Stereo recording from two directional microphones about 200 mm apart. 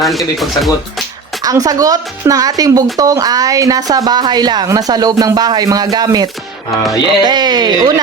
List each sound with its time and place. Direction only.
0.0 s speech: centre (ahead or behind)
1.4 s a woman's voice: 20° right (ahead or behind)